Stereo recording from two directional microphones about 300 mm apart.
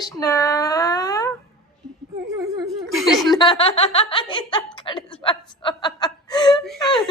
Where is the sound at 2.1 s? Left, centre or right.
Centre.